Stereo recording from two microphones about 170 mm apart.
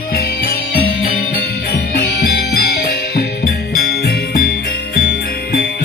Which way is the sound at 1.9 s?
65° left (ahead or behind).